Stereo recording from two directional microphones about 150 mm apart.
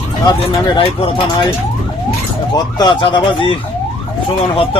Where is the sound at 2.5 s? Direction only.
30° left (ahead or behind).